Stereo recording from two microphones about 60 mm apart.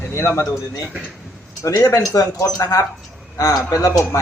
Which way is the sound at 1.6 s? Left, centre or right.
Left.